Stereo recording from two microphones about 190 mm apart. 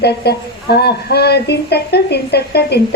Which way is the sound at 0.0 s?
60° left (ahead or behind).